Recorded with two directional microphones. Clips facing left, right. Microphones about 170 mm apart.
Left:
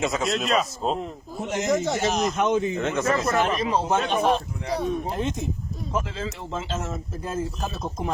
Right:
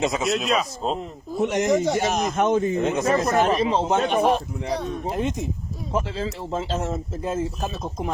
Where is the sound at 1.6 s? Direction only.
15° right (ahead or behind).